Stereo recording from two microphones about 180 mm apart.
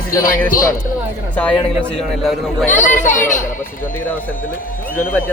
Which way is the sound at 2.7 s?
45° left (ahead or behind).